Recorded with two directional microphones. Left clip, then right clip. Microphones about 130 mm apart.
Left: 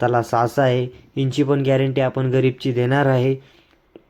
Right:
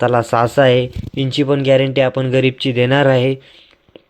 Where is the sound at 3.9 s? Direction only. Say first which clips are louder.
Right 3 dB; 15° right (ahead or behind).